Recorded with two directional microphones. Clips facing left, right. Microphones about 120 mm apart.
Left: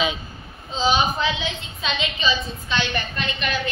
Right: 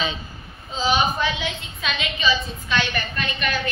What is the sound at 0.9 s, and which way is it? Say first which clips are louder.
A woman's voice: even; 25° left (ahead or behind).